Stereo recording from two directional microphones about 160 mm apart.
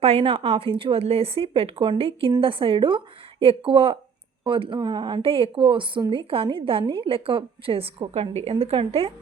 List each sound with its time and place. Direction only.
0.0 s a woman's voice: 35° right (ahead or behind)